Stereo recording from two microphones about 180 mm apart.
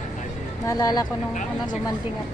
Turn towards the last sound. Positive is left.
turn(degrees=20)  # may be behind; listen again after turning